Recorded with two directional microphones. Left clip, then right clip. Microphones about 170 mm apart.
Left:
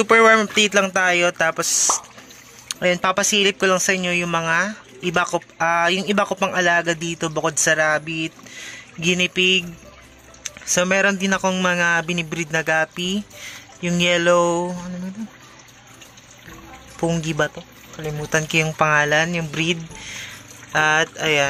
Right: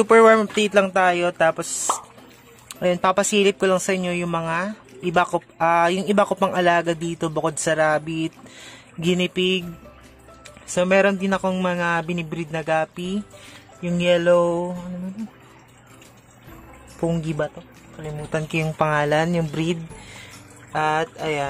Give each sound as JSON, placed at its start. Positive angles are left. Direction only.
{"t": 0.0, "sound": "speech", "side_deg": -10}
{"t": 10.4, "sound": "speech", "side_deg": -10}
{"t": 17.0, "sound": "speech", "side_deg": -10}
{"t": 20.7, "sound": "speech", "side_deg": 0}